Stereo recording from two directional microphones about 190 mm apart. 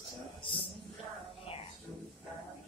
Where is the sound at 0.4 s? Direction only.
25° left (ahead or behind).